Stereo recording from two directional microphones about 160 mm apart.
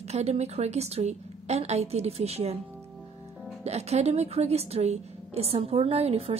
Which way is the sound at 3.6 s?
40° right (ahead or behind).